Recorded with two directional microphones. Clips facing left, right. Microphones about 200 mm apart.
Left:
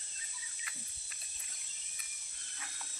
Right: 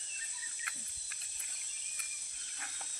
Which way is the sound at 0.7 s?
55° right (ahead or behind).